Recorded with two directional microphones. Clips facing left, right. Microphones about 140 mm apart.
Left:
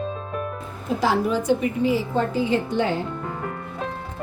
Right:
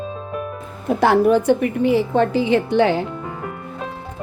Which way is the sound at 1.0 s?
60° right (ahead or behind).